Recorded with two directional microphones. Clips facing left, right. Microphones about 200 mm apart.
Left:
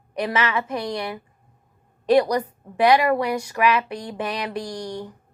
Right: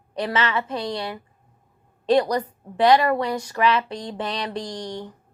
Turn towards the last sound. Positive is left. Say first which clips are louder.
# left 1 dB
turn(degrees=10)  # may be behind; listen again after turning